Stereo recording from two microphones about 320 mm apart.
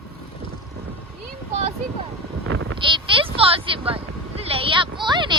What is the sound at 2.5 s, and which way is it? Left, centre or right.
Bleat, right.